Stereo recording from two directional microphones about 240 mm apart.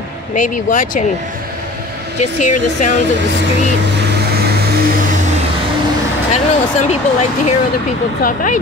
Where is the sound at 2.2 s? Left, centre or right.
Left.